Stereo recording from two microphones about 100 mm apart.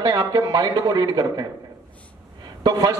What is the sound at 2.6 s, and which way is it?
Speech, 45° right (ahead or behind).